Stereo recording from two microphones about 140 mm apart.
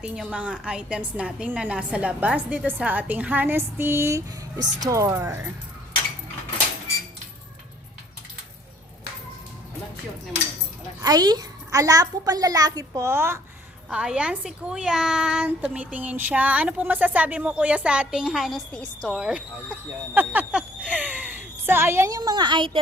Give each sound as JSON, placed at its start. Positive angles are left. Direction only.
{"t": 0.0, "sound": "a woman's voice", "side_deg": -10}
{"t": 11.0, "sound": "a child's voice", "side_deg": -30}
{"t": 13.9, "sound": "a woman's voice", "side_deg": -5}
{"t": 20.1, "sound": "a woman's voice", "side_deg": -10}